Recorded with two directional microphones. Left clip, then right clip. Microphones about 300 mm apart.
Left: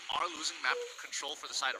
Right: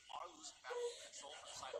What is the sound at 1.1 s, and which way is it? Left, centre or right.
Speech, left.